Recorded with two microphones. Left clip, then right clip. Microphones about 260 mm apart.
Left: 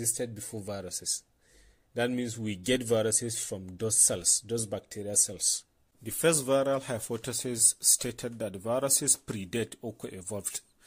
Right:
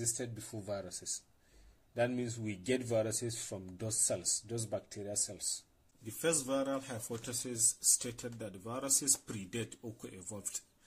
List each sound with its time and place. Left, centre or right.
0.2 s speech: left